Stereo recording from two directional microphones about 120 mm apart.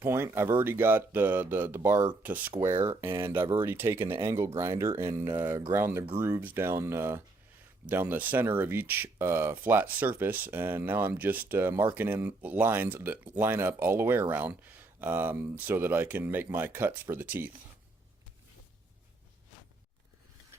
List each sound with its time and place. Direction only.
0.0 s speech: 20° right (ahead or behind)